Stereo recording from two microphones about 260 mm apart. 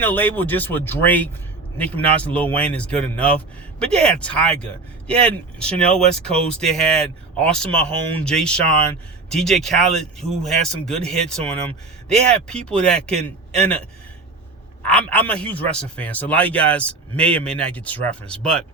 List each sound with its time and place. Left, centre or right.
0.0 s speech: centre
14.8 s speech: centre